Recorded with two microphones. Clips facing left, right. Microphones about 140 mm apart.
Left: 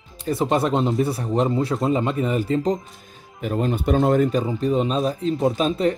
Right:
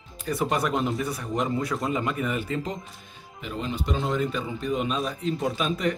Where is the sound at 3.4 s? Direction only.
50° left (ahead or behind).